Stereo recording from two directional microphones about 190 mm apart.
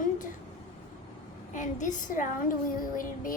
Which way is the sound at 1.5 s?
40° left (ahead or behind).